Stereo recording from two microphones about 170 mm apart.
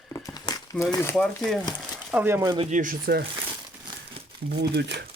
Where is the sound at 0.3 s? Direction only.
20° left (ahead or behind).